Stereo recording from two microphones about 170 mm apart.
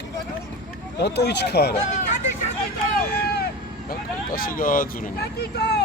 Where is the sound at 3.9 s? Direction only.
60° left (ahead or behind); by 5.8 s 75° left (ahead or behind).